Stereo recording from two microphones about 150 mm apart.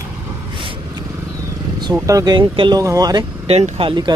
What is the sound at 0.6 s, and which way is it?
Vehicle, 35° right (ahead or behind).